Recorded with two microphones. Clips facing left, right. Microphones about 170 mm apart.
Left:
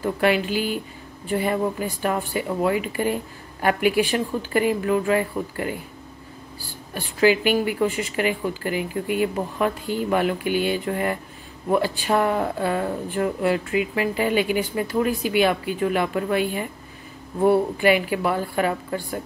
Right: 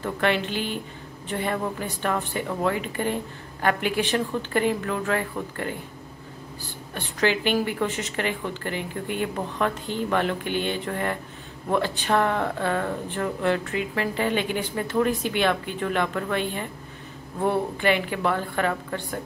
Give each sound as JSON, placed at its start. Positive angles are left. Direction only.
{"t": 0.0, "sound": "speech", "side_deg": 5}
{"t": 6.9, "sound": "speech", "side_deg": 5}